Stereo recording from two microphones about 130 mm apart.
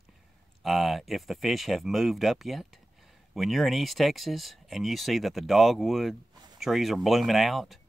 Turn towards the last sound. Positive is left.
turn(degrees=0)  # may be behind; listen again after turning